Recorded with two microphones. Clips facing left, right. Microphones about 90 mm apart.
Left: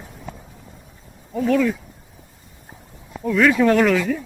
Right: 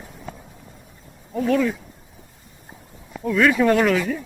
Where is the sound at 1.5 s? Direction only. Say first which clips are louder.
Left 2 dB; 15° right (ahead or behind).